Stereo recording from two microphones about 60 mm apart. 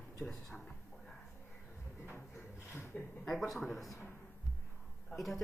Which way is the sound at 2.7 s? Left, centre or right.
Left.